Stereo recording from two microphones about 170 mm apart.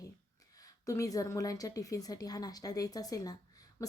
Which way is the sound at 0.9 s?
20° left (ahead or behind).